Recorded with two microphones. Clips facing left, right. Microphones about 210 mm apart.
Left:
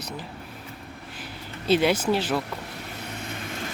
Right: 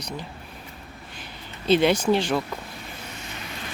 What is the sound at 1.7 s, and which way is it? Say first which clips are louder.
Speech: right 2 dB; 5° left (ahead or behind).